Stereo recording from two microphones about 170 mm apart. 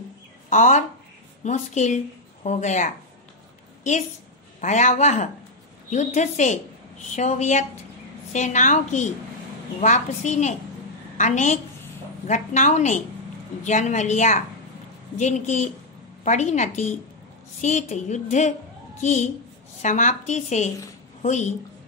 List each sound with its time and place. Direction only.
0.5 s a woman's voice: 45° left (ahead or behind)
4.6 s a woman's voice: 45° left (ahead or behind)